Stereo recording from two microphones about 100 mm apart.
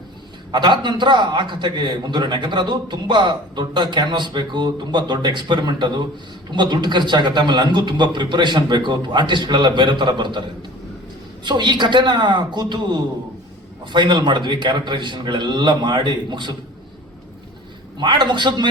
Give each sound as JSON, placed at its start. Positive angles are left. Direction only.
{"t": 0.5, "sound": "a man's voice", "side_deg": -50}
{"t": 11.4, "sound": "a man's voice", "side_deg": -50}
{"t": 17.9, "sound": "a man's voice", "side_deg": -50}